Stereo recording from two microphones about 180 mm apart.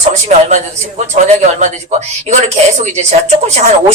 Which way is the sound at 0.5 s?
40° right (ahead or behind).